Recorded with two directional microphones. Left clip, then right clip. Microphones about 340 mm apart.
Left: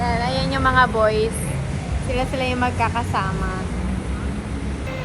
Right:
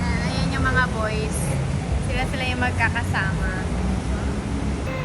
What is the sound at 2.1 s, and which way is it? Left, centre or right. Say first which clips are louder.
A woman's voice: left 4 dB; centre.